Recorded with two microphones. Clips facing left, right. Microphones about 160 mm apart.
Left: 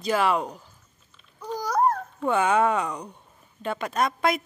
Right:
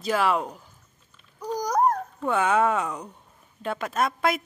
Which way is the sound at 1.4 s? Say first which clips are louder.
Right 1 dB; 15° right (ahead or behind).